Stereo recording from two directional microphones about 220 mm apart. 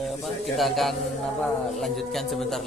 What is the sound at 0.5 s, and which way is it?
A man's voice, centre (ahead or behind).